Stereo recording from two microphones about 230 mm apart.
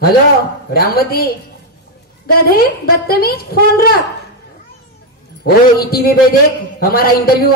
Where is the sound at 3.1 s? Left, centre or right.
Left.